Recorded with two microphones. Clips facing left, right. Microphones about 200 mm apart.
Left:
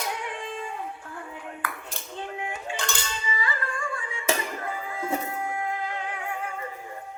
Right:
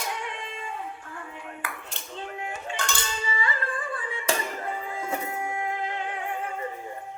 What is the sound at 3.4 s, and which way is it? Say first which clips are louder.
Music: right 1 dB; 30° right (ahead or behind).